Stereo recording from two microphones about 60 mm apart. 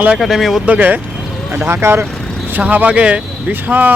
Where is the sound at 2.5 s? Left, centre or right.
Right.